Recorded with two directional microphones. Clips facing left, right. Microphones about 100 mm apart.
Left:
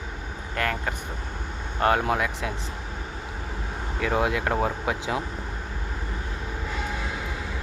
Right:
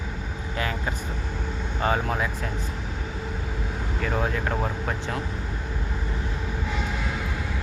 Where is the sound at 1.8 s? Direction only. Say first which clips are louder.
Left 3 dB; 70° left (ahead or behind).